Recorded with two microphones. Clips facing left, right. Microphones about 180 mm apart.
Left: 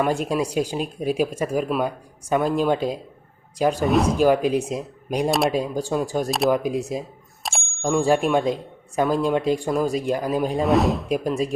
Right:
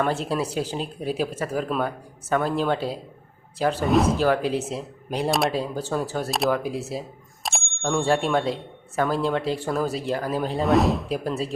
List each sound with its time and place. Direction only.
0.0 s speech: 15° left (ahead or behind)
3.8 s speech: centre (ahead or behind)
4.2 s speech: 15° left (ahead or behind)
7.4 s bicycle bell: centre (ahead or behind)
7.8 s speech: 10° left (ahead or behind)
10.6 s speech: centre (ahead or behind)
11.1 s speech: 15° left (ahead or behind)